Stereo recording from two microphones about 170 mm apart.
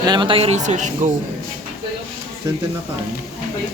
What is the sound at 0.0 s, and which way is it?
Speech, 25° right (ahead or behind).